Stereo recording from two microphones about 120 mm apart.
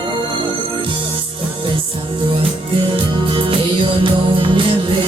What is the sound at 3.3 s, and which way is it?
Music, 45° right (ahead or behind).